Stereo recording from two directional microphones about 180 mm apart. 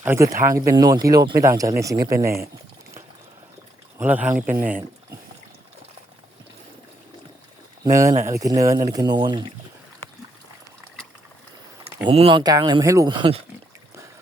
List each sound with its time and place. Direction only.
0.0 s speech: 15° right (ahead or behind)
3.9 s speech: 10° right (ahead or behind)
7.9 s speech: 15° right (ahead or behind)
12.0 s speech: 30° right (ahead or behind)